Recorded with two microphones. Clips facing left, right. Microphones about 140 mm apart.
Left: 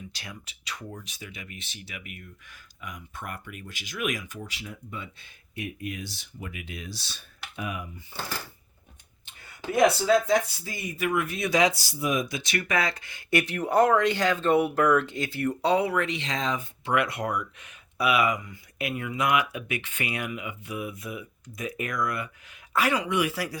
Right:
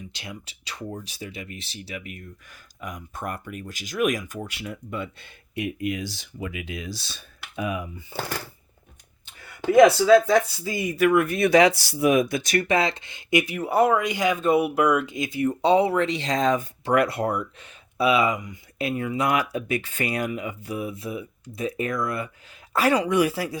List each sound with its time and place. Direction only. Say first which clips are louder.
0.1 s speech: right 4 dB; 25° right (ahead or behind); by 6.9 s 90° right
9.6 s speech: right 7 dB; 90° right; by 12.6 s 45° right (ahead or behind)
12.6 s speech: right 5 dB; 25° right (ahead or behind)
13.4 s speech: even; 5° right (ahead or behind)
18.8 s speech: right 4 dB; 30° right (ahead or behind)
23.3 s speech: right 3 dB; 25° right (ahead or behind)